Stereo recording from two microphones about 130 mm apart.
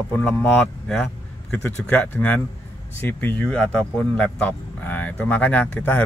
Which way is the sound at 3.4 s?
5° left (ahead or behind).